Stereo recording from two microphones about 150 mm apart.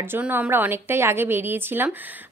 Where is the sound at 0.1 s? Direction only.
10° right (ahead or behind).